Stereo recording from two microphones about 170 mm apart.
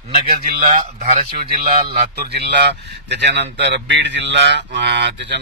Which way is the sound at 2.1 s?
75° right (ahead or behind).